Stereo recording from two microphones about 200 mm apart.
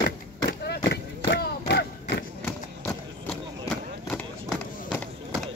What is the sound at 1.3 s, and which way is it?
Battle cry, 55° left (ahead or behind).